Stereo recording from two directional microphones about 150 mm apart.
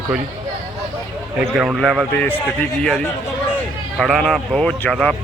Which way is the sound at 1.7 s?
Centre (ahead or behind).